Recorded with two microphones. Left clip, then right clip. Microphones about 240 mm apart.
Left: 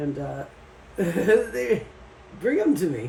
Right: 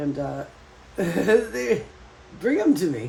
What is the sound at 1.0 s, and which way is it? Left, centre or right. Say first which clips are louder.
Speech: even; right.